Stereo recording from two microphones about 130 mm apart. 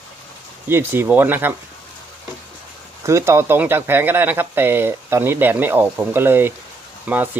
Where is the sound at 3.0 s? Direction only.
20° right (ahead or behind).